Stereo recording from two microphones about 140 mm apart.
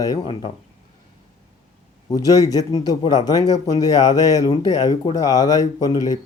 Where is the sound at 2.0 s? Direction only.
25° left (ahead or behind).